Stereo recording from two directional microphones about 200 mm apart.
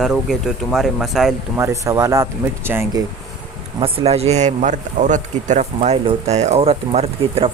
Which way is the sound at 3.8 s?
30° right (ahead or behind).